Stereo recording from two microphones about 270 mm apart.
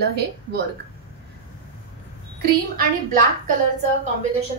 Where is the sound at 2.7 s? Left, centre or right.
Right.